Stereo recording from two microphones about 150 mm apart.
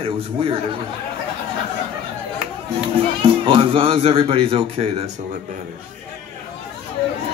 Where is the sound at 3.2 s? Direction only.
40° right (ahead or behind).